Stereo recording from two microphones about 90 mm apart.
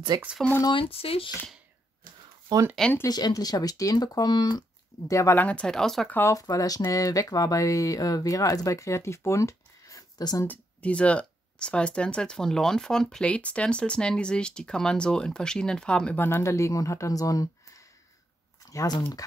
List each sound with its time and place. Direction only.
0.1 s speech: 50° right (ahead or behind)
0.7 s speech: 85° left
2.5 s speech: 50° right (ahead or behind)
3.1 s speech: 50° left (ahead or behind)
5.0 s speech: 35° left (ahead or behind)
5.4 s speech: 10° left (ahead or behind)
6.0 s speech: 25° left (ahead or behind)
6.3 s speech: 40° left (ahead or behind)
10.4 s speech: 15° left (ahead or behind)
16.2 s speech: 25° left (ahead or behind)